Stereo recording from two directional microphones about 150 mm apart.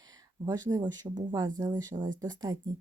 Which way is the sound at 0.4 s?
25° right (ahead or behind).